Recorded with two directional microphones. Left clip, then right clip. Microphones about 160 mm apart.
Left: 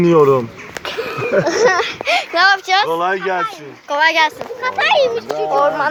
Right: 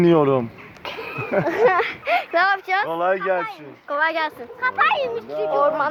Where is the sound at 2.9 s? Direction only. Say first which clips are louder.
Left 3 dB; 15° right (ahead or behind).